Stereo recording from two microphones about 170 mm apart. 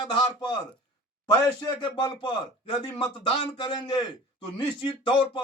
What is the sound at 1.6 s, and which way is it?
Speech, 25° left (ahead or behind).